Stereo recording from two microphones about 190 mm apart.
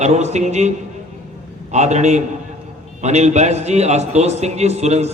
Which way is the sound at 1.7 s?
35° right (ahead or behind).